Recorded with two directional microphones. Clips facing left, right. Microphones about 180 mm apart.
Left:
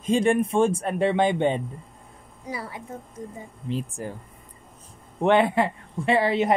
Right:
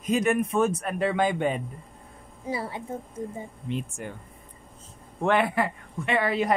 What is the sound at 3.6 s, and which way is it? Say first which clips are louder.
Speech: left 3 dB; 35° left (ahead or behind).